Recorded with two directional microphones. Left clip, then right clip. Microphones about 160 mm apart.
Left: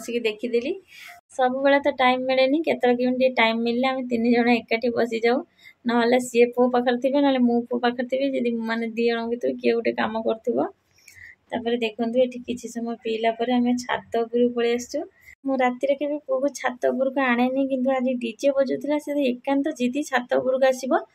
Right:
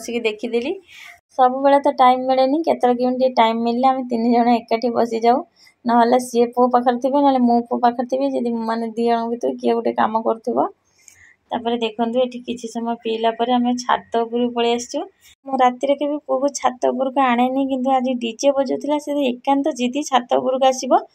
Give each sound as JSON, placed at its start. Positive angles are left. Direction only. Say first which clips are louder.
{"t": 0.0, "sound": "a woman's voice", "louder": "right 3 dB", "side_deg": -5}
{"t": 10.4, "sound": "speech", "louder": "right 4 dB", "side_deg": 20}
{"t": 11.5, "sound": "speech", "louder": "right 4 dB", "side_deg": 0}